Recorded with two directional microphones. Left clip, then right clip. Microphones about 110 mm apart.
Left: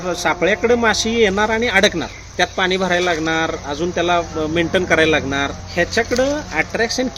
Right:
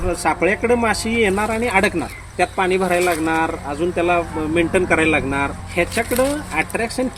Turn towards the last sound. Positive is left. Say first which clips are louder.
# left 2 dB
turn(degrees=15)  # may be behind; listen again after turning